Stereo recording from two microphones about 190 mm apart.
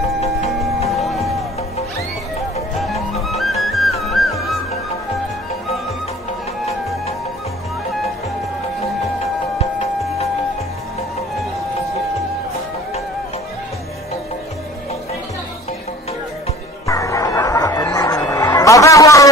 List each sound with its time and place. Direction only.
0.8 s music: centre (ahead or behind)
2.8 s music: centre (ahead or behind)
9.6 s music: 35° left (ahead or behind)
16.8 s music: 15° left (ahead or behind)